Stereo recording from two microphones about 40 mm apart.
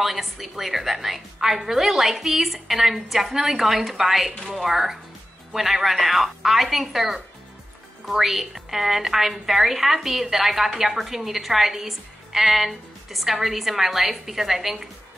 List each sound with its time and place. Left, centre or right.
0.0 s a woman's voice: centre
4.4 s a woman's voice: centre
4.6 s a woman's voice: centre